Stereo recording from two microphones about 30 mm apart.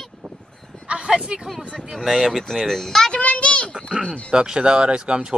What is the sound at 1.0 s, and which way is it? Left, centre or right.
Speech, right.